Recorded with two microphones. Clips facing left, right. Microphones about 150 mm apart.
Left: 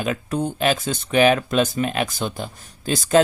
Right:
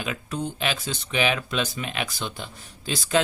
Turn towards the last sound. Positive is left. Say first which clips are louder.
# left 7 dB
turn(degrees=45)  # may be behind; listen again after turning